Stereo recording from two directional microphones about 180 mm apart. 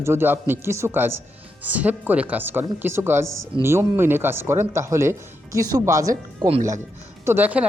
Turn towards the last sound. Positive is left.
turn(degrees=-10)  # may be behind; listen again after turning